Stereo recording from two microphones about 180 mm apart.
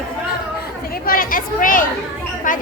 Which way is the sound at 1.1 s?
50° left (ahead or behind).